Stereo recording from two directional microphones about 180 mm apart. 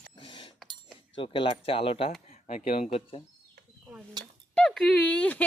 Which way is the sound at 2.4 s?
50° left (ahead or behind).